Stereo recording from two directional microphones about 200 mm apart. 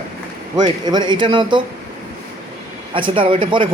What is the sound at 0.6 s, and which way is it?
Speech, 20° right (ahead or behind).